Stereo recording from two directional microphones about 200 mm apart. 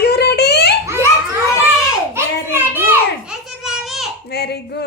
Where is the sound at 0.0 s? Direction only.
55° left (ahead or behind).